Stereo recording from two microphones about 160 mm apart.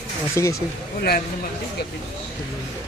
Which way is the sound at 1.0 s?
75° left (ahead or behind).